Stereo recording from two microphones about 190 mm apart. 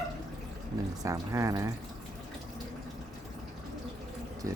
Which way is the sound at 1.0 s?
15° right (ahead or behind).